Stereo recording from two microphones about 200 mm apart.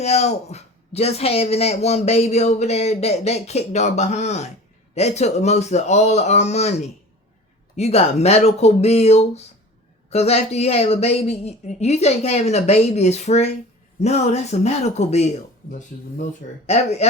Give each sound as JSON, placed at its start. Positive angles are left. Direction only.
{"t": 0.0, "sound": "a man's voice", "side_deg": 35}
{"t": 16.6, "sound": "a man's voice", "side_deg": 30}